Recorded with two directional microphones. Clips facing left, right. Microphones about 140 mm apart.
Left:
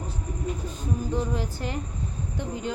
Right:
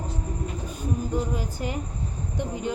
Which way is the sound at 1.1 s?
15° right (ahead or behind).